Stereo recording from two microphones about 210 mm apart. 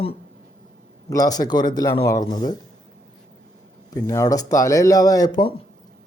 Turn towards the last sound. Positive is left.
turn(degrees=20)  # may be behind; listen again after turning